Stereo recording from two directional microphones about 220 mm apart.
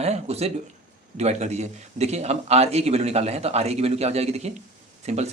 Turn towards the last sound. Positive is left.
turn(degrees=-30)  # may be behind; listen again after turning